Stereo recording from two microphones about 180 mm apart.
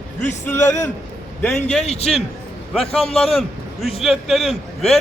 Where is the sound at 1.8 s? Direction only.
35° left (ahead or behind).